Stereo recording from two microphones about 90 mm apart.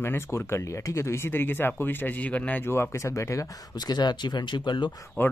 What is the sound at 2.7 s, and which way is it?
Speech, 30° left (ahead or behind).